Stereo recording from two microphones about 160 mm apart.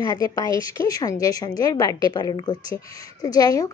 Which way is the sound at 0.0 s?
20° left (ahead or behind).